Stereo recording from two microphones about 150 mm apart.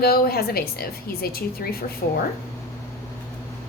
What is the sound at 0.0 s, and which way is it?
A woman's voice, 90° left.